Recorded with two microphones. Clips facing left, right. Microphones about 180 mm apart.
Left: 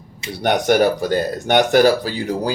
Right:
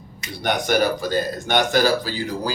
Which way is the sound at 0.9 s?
65° left (ahead or behind).